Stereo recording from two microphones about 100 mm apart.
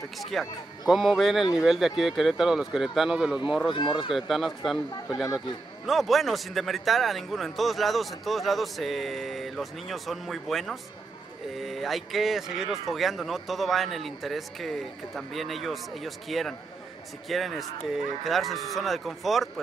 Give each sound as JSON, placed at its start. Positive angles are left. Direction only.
{"t": 0.2, "sound": "speech", "side_deg": 0}
{"t": 3.7, "sound": "speech", "side_deg": 55}
{"t": 4.1, "sound": "speech", "side_deg": 0}